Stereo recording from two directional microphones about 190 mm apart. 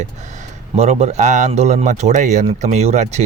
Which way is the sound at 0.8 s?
35° right (ahead or behind).